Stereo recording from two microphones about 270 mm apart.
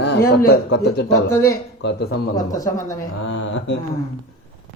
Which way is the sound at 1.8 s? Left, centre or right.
Left.